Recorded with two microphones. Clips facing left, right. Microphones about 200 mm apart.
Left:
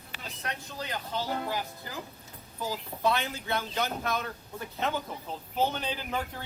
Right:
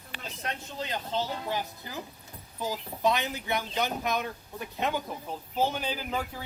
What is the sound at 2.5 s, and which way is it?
A man's voice, 15° right (ahead or behind).